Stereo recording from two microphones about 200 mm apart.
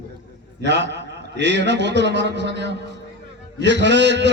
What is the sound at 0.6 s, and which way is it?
A man's voice, 60° right (ahead or behind).